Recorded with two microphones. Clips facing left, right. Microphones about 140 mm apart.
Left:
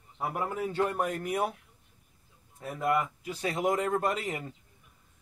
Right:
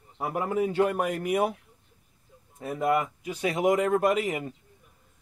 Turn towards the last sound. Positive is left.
turn(degrees=-15)  # may be behind; listen again after turning